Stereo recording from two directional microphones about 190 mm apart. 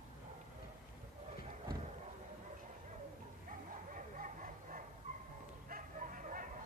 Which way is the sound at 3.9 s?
45° right (ahead or behind).